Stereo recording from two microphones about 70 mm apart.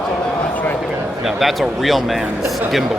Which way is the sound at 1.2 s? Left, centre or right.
Centre.